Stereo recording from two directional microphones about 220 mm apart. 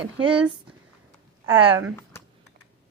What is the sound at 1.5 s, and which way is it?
Speech, 25° right (ahead or behind).